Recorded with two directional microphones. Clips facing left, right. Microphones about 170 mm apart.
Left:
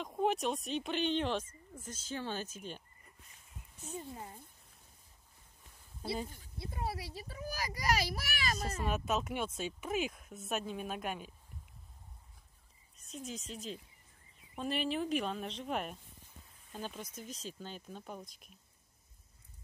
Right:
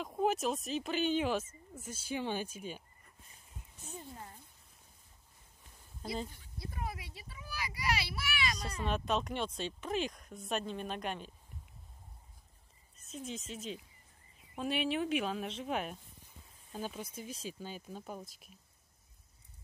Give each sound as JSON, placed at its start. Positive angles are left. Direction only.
{"t": 0.0, "sound": "speech", "side_deg": -5}
{"t": 3.8, "sound": "speech", "side_deg": 10}
{"t": 6.0, "sound": "speech", "side_deg": 10}
{"t": 6.6, "sound": "a child's voice", "side_deg": 30}
{"t": 8.8, "sound": "speech", "side_deg": 5}
{"t": 12.9, "sound": "speech", "side_deg": 0}